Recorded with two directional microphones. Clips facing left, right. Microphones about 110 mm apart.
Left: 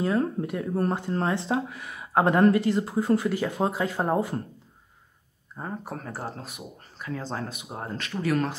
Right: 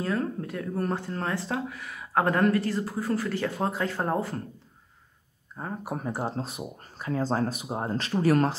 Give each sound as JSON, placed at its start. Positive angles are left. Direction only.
{"t": 0.0, "sound": "speech", "side_deg": 20}
{"t": 5.9, "sound": "speech", "side_deg": -15}
{"t": 6.3, "sound": "speech", "side_deg": -30}